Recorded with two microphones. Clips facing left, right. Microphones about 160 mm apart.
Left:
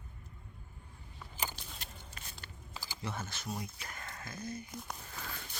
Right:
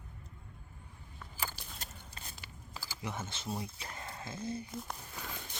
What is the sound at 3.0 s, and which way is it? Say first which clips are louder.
Speech: right 1 dB; 20° right (ahead or behind).